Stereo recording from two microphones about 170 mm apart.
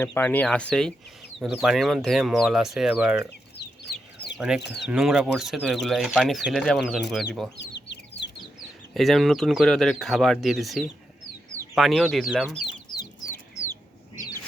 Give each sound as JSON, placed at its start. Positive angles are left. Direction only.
{"t": 0.0, "sound": "speech", "side_deg": 10}
{"t": 4.4, "sound": "speech", "side_deg": -5}
{"t": 4.6, "sound": "speech", "side_deg": 80}
{"t": 4.9, "sound": "speech", "side_deg": -5}
{"t": 7.5, "sound": "chicken", "side_deg": 90}
{"t": 8.9, "sound": "speech", "side_deg": 0}
{"t": 12.6, "sound": "chicken", "side_deg": 25}